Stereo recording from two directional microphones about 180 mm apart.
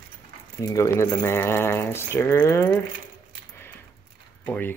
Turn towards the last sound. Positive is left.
turn(degrees=10)  # may be behind; listen again after turning